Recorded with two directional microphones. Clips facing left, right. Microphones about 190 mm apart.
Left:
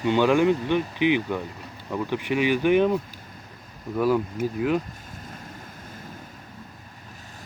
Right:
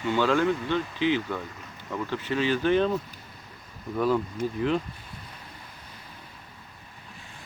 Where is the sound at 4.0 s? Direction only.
10° left (ahead or behind).